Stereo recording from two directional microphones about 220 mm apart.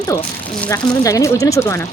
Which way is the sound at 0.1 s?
15° left (ahead or behind).